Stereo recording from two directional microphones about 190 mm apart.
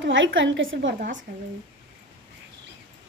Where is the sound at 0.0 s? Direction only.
75° right (ahead or behind).